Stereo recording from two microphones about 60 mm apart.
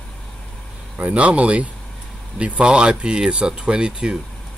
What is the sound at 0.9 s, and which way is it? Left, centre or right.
Speech, right.